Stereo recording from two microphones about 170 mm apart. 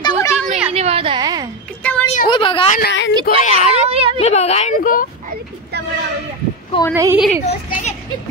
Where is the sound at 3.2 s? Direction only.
45° left (ahead or behind).